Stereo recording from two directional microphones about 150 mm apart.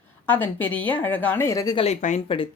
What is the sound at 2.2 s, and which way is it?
Speech, 35° left (ahead or behind).